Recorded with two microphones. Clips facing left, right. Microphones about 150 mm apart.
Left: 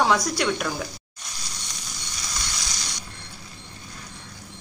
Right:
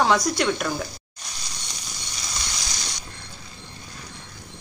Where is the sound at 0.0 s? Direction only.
5° left (ahead or behind).